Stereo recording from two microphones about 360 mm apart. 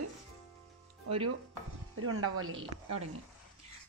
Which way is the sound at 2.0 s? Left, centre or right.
Right.